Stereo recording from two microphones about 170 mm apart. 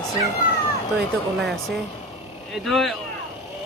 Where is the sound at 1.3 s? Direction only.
Centre (ahead or behind).